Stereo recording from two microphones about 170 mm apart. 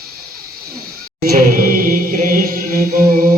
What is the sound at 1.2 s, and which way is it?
Chant, 60° right (ahead or behind).